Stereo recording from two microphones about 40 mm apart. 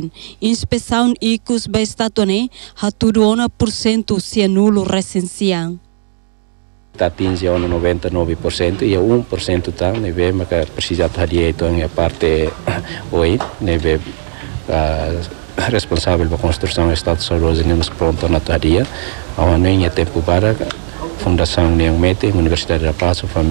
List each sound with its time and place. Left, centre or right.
0.4 s speech: centre
7.0 s speech: centre
9.0 s speech: centre
9.4 s speech: centre